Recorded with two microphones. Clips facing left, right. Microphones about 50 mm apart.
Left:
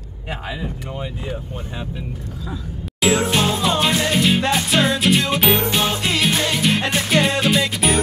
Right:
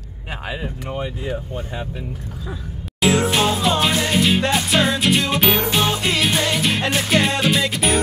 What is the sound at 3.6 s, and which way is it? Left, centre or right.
Music, centre.